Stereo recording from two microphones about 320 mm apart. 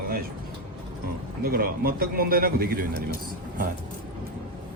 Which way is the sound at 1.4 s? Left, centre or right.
Right.